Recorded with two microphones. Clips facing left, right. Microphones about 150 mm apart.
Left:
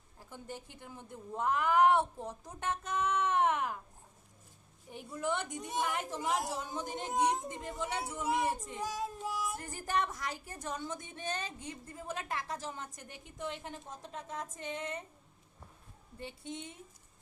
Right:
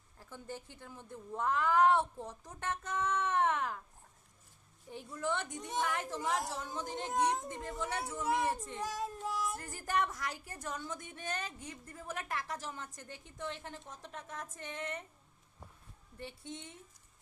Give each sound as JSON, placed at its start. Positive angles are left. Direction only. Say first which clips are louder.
{"t": 0.2, "sound": "a woman's voice", "louder": "even", "side_deg": 15}
{"t": 4.9, "sound": "a woman's voice", "louder": "left 1 dB", "side_deg": 15}
{"t": 8.8, "sound": "music", "louder": "left 1 dB", "side_deg": 0}
{"t": 9.6, "sound": "a woman's voice", "louder": "even", "side_deg": 20}
{"t": 16.1, "sound": "a woman's voice", "louder": "left 2 dB", "side_deg": 15}